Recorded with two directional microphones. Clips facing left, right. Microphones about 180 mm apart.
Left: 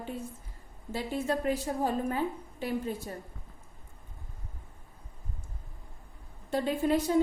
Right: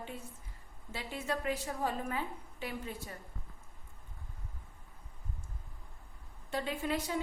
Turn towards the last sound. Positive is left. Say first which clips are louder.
# left 8 dB
turn(degrees=40)  # may be behind; listen again after turning